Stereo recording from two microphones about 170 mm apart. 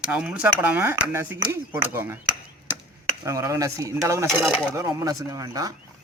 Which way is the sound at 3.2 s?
20° right (ahead or behind).